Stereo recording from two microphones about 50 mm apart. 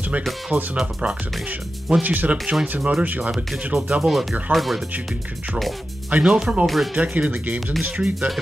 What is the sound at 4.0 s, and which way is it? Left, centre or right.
Speech, centre.